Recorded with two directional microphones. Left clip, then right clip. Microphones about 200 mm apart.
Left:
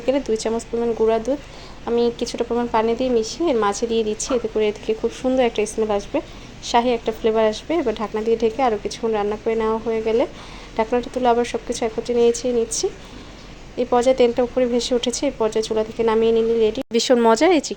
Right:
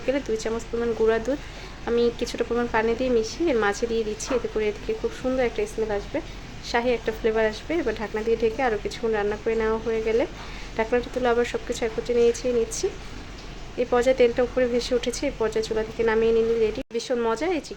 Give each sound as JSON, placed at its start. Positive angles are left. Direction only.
{"t": 0.1, "sound": "a woman's voice", "side_deg": 20}
{"t": 1.0, "sound": "a woman's voice", "side_deg": 10}
{"t": 16.9, "sound": "speech", "side_deg": 40}